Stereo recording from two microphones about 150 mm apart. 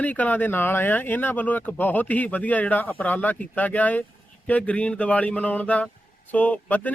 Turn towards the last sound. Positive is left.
turn(degrees=10)  # may be behind; listen again after turning